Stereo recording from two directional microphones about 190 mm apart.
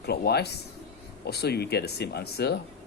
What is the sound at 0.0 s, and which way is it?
A man's voice, 55° left (ahead or behind).